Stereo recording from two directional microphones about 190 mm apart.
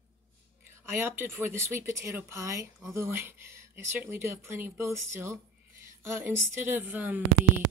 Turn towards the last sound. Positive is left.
turn(degrees=-10)  # may be behind; listen again after turning